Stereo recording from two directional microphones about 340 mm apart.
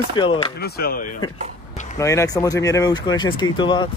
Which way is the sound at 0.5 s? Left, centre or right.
Left.